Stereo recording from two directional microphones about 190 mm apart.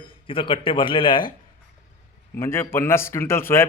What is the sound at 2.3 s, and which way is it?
A man's voice, 15° left (ahead or behind).